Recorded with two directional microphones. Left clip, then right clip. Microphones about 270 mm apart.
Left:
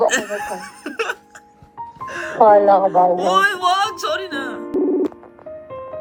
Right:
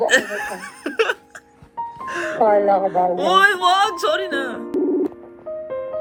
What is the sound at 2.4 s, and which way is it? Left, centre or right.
Speech, left.